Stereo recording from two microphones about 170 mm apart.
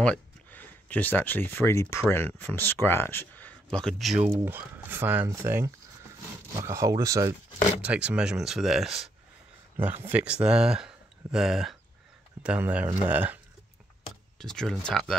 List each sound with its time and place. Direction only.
0.0 s speech: 10° left (ahead or behind)
4.3 s speech: 10° right (ahead or behind)
7.8 s speech: 5° right (ahead or behind)
14.4 s speech: 5° left (ahead or behind)